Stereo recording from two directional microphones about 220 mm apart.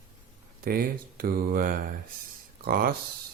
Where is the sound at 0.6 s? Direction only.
40° right (ahead or behind).